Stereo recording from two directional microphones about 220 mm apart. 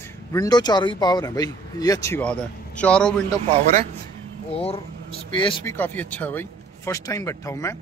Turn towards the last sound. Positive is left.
turn(degrees=15)  # may be behind; listen again after turning